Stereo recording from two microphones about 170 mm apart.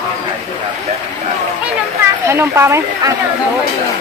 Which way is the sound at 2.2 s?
15° right (ahead or behind).